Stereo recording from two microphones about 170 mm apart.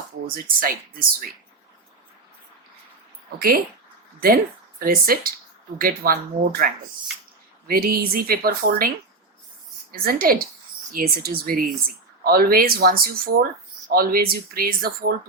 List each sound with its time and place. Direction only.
0.3 s speech: 60° right (ahead or behind)
3.3 s speech: 60° right (ahead or behind)
4.8 s speech: 60° right (ahead or behind)
7.7 s speech: 60° right (ahead or behind)
9.9 s speech: 60° right (ahead or behind)